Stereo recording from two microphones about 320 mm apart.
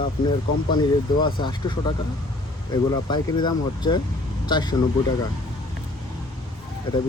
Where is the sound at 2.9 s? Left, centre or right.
Centre.